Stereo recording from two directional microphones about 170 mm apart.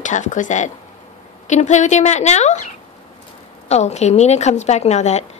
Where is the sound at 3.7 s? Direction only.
40° left (ahead or behind).